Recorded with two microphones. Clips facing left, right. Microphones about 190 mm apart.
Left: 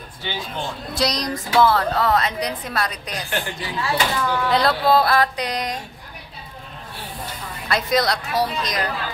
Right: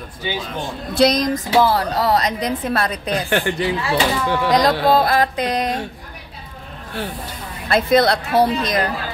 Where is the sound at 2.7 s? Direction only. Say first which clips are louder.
Right 6 dB; 55° right (ahead or behind).